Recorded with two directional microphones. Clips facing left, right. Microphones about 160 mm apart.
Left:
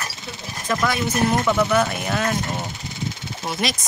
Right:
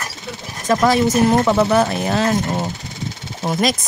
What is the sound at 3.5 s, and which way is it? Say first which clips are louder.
Speech: right 7 dB; 45° right (ahead or behind).